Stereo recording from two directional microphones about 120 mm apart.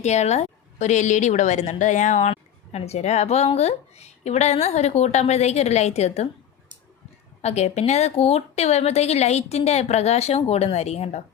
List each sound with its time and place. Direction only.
0.0 s a woman's voice: 70° left (ahead or behind)
2.3 s speech: 60° left (ahead or behind)
7.4 s speech: 70° left (ahead or behind)